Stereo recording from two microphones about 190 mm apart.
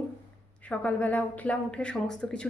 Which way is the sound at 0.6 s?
5° left (ahead or behind).